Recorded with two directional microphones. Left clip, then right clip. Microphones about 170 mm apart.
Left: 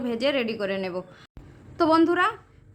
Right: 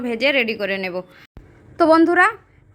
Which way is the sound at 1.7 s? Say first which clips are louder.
Right 7 dB; 25° right (ahead or behind).